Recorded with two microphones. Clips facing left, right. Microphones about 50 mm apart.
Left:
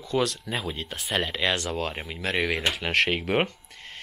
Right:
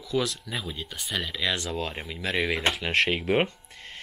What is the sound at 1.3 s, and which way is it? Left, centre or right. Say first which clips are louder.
Speech: left 2 dB; left.